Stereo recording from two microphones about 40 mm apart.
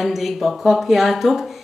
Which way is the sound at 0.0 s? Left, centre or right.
Centre.